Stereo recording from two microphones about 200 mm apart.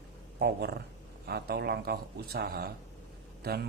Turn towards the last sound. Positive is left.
turn(degrees=-50)  # may be behind; listen again after turning